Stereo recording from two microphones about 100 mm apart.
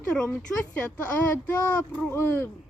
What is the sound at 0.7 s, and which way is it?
Speech, 15° left (ahead or behind).